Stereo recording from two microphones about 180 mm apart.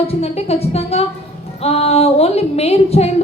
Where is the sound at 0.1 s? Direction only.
35° left (ahead or behind).